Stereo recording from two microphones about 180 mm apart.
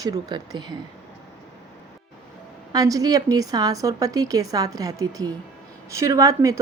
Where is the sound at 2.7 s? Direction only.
20° right (ahead or behind).